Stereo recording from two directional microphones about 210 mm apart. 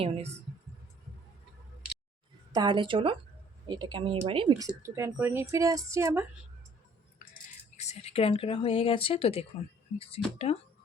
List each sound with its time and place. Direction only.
0.0 s speech: 30° right (ahead or behind)
2.5 s speech: 20° right (ahead or behind)
7.8 s speech: 30° left (ahead or behind)